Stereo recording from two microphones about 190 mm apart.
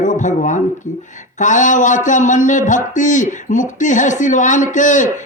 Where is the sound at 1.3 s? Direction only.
40° left (ahead or behind).